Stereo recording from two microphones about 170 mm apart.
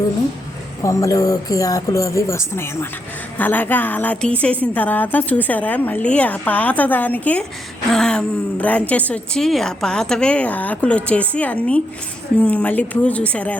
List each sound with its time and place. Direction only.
0.8 s a woman's voice: 20° left (ahead or behind)